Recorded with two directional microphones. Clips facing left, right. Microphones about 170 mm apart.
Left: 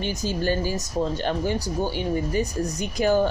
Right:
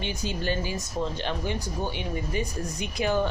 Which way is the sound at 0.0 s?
40° left (ahead or behind).